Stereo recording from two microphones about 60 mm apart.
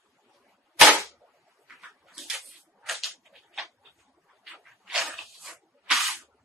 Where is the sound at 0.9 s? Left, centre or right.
Right.